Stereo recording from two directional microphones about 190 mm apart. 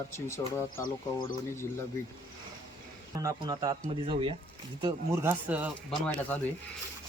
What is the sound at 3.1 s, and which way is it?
Speech, 20° right (ahead or behind).